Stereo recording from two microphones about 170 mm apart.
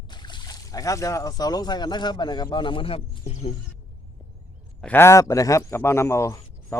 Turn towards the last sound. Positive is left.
turn(degrees=20)  # may be behind; listen again after turning